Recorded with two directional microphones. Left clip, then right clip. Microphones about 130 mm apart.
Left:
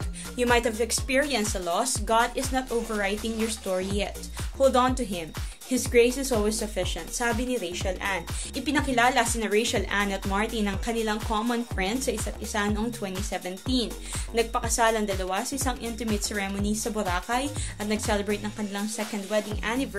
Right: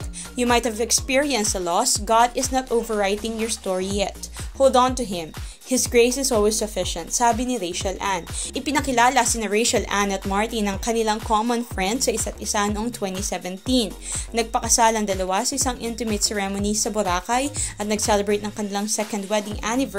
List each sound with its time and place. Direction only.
0.4 s a woman's voice: 35° right (ahead or behind); by 13.8 s 50° right (ahead or behind)
14.3 s a woman's voice: 40° right (ahead or behind)